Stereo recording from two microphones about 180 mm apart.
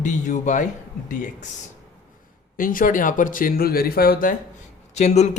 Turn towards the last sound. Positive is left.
turn(degrees=40)  # may be behind; listen again after turning